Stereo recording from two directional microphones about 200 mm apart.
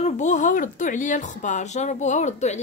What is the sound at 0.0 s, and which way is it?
Speech, 35° left (ahead or behind).